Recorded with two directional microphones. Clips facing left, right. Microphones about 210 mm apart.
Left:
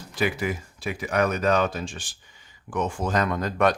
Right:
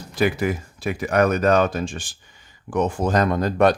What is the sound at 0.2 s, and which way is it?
Speech, 45° right (ahead or behind).